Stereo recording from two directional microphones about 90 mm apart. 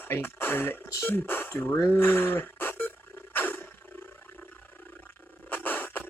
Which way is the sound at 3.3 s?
20° left (ahead or behind).